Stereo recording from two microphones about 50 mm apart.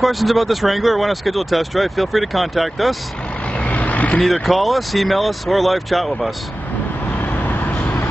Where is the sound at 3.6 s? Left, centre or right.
Left.